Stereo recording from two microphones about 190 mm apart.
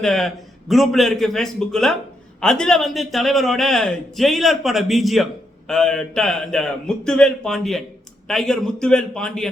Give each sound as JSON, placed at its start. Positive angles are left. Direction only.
{"t": 0.0, "sound": "a man's voice", "side_deg": 0}